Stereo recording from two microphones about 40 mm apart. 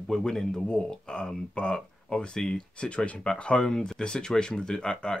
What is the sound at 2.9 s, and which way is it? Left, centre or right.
Speech, left.